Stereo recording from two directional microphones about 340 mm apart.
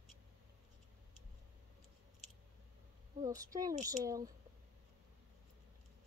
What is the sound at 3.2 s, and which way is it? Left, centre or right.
Speech, centre.